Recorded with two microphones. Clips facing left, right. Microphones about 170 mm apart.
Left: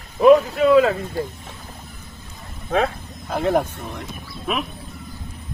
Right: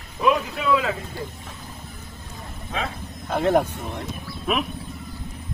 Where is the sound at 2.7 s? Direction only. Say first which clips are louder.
Left 9 dB; 60° left (ahead or behind).